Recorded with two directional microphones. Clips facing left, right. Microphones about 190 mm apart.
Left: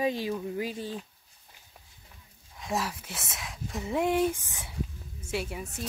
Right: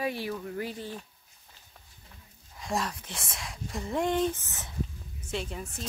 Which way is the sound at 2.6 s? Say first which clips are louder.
Even; 5° left (ahead or behind).